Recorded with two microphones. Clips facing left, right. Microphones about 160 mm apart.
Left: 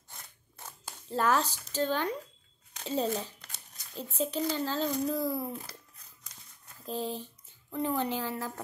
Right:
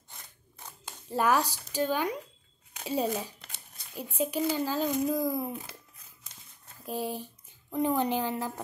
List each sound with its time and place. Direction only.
0.7 s a sound: 15° right (ahead or behind)
1.7 s speech: 10° right (ahead or behind)
6.9 s speech: 10° right (ahead or behind)